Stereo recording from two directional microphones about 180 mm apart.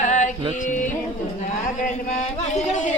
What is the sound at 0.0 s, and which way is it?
Music, 45° left (ahead or behind).